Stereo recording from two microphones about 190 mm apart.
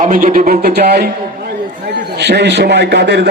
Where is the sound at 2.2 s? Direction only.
65° right (ahead or behind).